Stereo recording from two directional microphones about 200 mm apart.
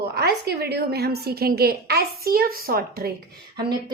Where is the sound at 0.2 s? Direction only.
55° right (ahead or behind).